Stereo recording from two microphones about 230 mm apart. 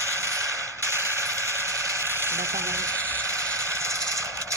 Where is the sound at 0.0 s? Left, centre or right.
Centre.